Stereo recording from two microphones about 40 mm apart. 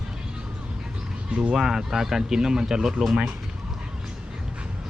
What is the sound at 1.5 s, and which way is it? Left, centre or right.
Speech, centre.